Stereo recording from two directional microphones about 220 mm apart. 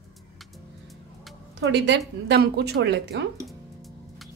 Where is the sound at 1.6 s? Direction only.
55° right (ahead or behind).